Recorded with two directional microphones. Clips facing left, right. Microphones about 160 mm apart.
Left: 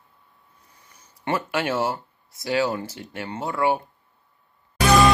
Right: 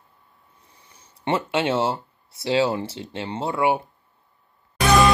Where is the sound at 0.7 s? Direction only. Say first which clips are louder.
Right 1 dB; 30° right (ahead or behind).